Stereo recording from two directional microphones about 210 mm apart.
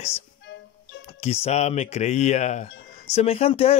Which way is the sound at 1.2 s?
30° left (ahead or behind).